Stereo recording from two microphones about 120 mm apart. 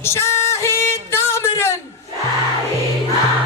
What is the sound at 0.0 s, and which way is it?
Music, 20° left (ahead or behind).